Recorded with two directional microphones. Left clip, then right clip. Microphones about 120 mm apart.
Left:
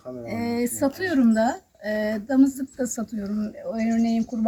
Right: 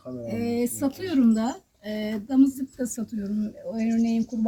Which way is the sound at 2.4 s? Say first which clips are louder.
Even; 30° right (ahead or behind).